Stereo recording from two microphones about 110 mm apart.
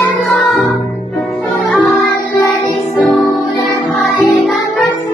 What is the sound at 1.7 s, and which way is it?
Music, centre (ahead or behind).